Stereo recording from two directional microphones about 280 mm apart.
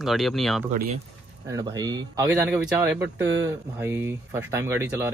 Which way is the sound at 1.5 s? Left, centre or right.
Centre.